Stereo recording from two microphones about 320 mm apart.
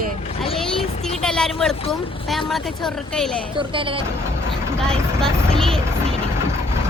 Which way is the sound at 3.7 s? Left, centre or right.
Centre.